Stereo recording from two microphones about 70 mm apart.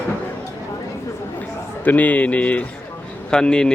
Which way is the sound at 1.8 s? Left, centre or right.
Left.